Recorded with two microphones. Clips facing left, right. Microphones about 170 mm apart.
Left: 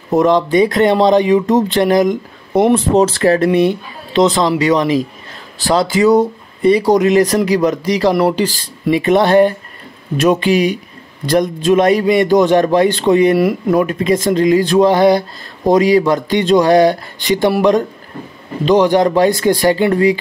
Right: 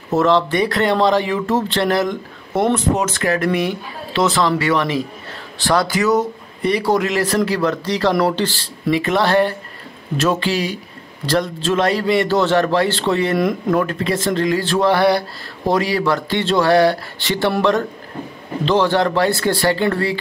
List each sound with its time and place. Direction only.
0.1 s speech: 15° left (ahead or behind)
3.0 s speech: 35° left (ahead or behind); by 20.2 s 15° left (ahead or behind)